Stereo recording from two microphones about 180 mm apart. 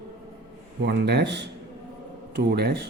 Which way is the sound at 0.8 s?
70° right (ahead or behind).